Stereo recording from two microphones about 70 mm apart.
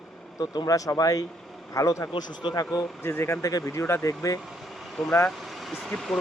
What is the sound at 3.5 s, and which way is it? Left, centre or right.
Speech, left.